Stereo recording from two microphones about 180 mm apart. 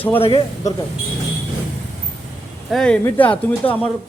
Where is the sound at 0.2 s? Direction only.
30° left (ahead or behind).